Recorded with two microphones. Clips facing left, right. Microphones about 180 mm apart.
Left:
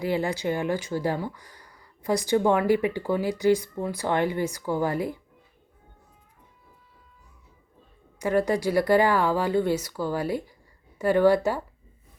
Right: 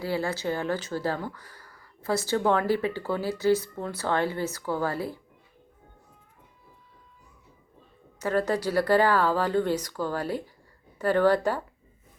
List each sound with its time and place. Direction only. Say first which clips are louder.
0.0 s speech: left 3 dB; 15° left (ahead or behind)
8.2 s speech: left 2 dB; 15° left (ahead or behind)